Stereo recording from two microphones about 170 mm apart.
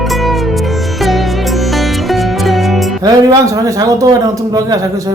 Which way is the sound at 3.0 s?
20° right (ahead or behind).